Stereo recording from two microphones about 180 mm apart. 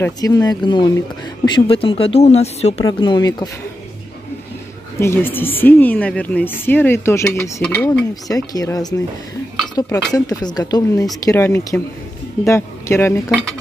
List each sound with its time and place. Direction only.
0.0 s speech: 20° left (ahead or behind); by 2.7 s 35° left (ahead or behind)
2.8 s speech: 25° left (ahead or behind)
4.9 s a woman's voice: 15° left (ahead or behind)
13.3 s dishes: centre (ahead or behind)